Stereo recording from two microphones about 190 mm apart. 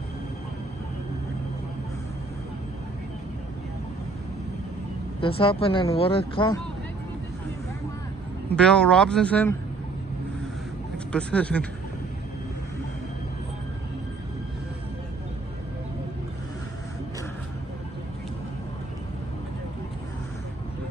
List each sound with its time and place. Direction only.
5.2 s speech: 30° left (ahead or behind)
8.5 s speech: 5° left (ahead or behind)
11.1 s speech: 5° left (ahead or behind)